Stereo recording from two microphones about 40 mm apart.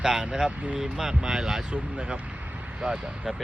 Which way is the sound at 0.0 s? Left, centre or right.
Centre.